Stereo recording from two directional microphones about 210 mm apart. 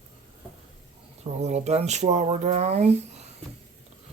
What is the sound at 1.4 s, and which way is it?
Speech, 30° right (ahead or behind).